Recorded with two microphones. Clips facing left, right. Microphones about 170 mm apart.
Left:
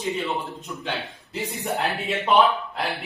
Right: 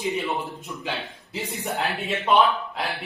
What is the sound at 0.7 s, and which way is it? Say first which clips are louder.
Speech: left 3 dB; centre (ahead or behind).